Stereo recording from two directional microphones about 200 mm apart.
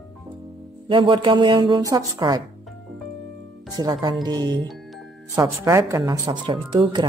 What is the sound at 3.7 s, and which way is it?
A woman's voice, 20° right (ahead or behind).